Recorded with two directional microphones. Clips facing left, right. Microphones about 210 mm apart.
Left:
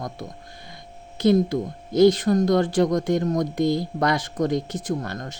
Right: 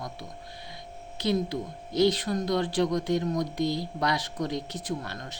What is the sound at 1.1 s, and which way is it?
Speech, 45° left (ahead or behind).